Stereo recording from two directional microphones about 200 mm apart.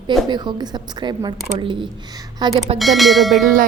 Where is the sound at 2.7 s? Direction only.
Centre (ahead or behind).